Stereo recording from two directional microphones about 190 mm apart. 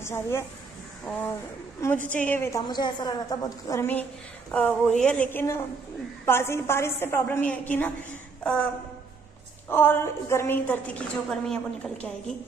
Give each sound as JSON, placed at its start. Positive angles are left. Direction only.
{"t": 0.0, "sound": "speech", "side_deg": 15}
{"t": 1.1, "sound": "a sound", "side_deg": 5}
{"t": 1.8, "sound": "a woman's voice", "side_deg": 10}
{"t": 2.6, "sound": "a woman's voice", "side_deg": 25}
{"t": 9.7, "sound": "a woman's voice", "side_deg": 10}